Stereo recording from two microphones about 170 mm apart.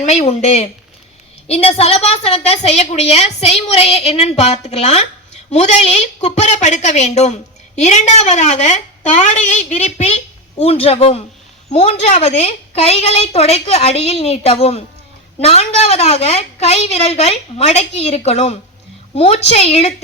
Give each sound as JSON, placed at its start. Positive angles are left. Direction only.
{"t": 0.0, "sound": "a woman's voice", "side_deg": 40}